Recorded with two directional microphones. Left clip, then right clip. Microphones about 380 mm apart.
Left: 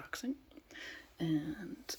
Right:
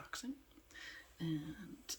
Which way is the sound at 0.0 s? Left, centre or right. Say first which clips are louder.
Left 5 dB; centre.